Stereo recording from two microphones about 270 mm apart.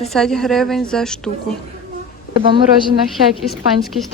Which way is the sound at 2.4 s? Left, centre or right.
Centre.